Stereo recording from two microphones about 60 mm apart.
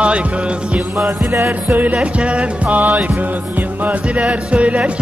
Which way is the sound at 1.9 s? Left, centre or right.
Centre.